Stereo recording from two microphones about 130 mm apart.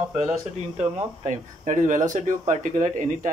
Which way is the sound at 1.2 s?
70° right (ahead or behind).